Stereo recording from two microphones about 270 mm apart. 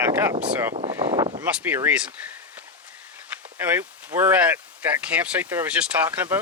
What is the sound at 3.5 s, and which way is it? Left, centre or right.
Speech, centre.